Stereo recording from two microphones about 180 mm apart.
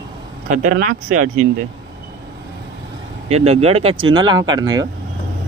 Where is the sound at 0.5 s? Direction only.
45° right (ahead or behind).